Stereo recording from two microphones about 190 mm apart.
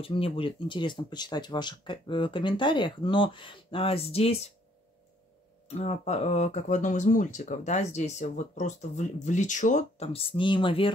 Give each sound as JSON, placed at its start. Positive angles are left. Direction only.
{"t": 0.0, "sound": "speech", "side_deg": 30}
{"t": 5.7, "sound": "speech", "side_deg": 35}